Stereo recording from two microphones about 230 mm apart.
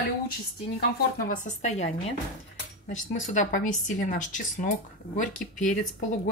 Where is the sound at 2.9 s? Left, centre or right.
Left.